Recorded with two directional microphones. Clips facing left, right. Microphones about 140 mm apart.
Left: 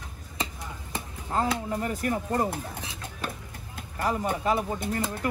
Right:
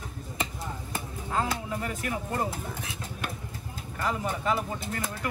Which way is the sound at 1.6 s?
40° left (ahead or behind).